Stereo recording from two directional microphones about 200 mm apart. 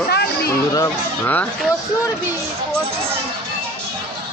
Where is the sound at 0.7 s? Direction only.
15° left (ahead or behind).